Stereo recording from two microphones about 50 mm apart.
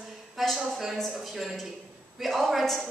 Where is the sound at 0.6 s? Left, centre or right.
Centre.